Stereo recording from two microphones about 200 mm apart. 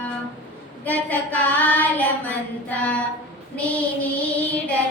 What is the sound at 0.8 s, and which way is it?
Child singing, 10° left (ahead or behind).